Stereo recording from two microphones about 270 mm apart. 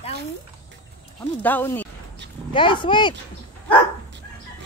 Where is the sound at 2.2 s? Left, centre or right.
Right.